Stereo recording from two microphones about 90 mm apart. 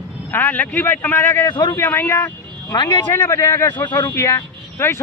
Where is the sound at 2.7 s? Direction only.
55° left (ahead or behind).